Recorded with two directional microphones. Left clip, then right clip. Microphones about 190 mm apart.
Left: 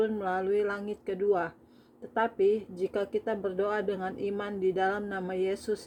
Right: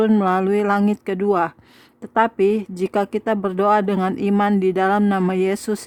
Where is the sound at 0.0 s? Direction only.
45° right (ahead or behind).